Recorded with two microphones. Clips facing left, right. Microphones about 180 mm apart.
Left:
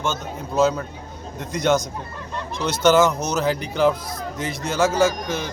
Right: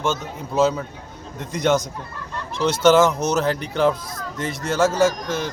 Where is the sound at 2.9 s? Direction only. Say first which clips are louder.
Right 1 dB; 5° left (ahead or behind).